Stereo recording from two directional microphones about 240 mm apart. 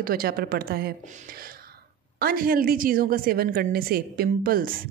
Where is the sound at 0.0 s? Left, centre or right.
Right.